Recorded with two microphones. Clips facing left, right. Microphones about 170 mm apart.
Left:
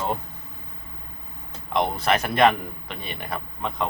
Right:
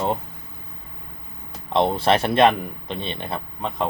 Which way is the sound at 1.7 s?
30° right (ahead or behind).